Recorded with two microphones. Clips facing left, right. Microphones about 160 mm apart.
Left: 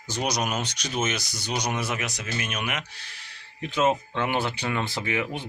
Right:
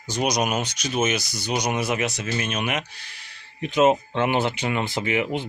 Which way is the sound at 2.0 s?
25° right (ahead or behind).